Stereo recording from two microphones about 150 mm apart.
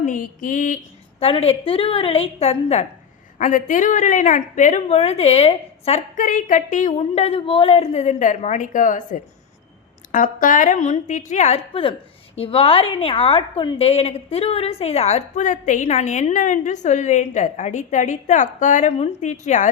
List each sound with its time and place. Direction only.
0.0 s a woman's voice: 60° left (ahead or behind)
1.2 s a woman's voice: 40° left (ahead or behind)
3.3 s a woman's voice: 60° left (ahead or behind); by 6.0 s 45° left (ahead or behind)
6.1 s a woman's voice: 60° left (ahead or behind)
7.0 s a woman's voice: 40° left (ahead or behind)